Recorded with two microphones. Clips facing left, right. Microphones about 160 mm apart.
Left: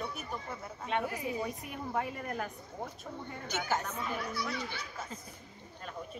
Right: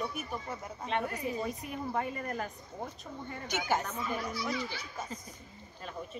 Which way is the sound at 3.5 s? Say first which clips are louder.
Right 2 dB; 10° right (ahead or behind).